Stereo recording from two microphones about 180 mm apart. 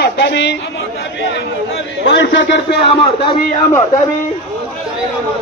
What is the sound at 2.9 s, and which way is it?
Speech, 30° left (ahead or behind).